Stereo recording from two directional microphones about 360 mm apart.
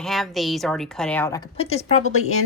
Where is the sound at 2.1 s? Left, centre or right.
Left.